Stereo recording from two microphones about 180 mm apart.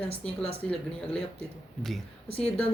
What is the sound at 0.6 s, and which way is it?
Speech, 5° left (ahead or behind).